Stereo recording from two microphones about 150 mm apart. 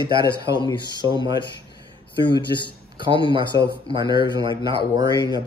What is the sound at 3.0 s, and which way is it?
Speech, 35° right (ahead or behind).